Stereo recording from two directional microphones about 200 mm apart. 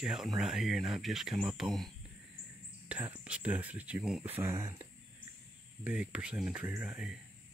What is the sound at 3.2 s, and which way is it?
Speech, 5° right (ahead or behind).